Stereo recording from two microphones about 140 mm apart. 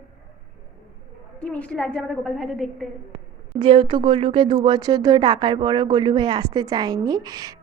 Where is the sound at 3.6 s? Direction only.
35° right (ahead or behind).